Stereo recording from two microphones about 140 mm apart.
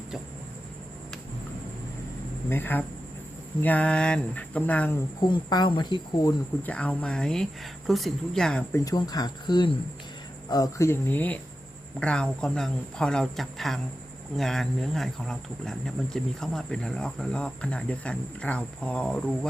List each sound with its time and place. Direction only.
2.5 s speech: 15° left (ahead or behind)
5.2 s speech: 30° left (ahead or behind)
6.6 s speech: 10° left (ahead or behind)
8.7 s speech: 25° left (ahead or behind); by 19.5 s 5° left (ahead or behind)